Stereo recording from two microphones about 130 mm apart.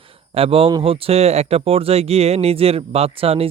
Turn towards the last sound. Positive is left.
turn(degrees=-50)  # may be behind; listen again after turning